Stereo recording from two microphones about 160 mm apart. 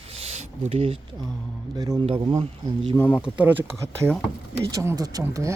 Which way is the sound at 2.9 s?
10° left (ahead or behind).